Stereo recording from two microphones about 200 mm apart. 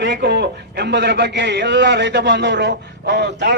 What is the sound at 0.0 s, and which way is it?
A man's voice, 60° right (ahead or behind).